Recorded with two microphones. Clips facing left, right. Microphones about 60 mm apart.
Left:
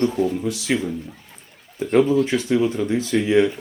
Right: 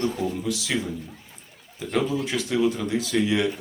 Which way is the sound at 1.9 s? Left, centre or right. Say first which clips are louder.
Left 8 dB; left.